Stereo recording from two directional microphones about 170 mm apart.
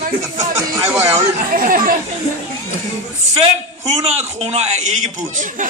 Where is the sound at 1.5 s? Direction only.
55° right (ahead or behind).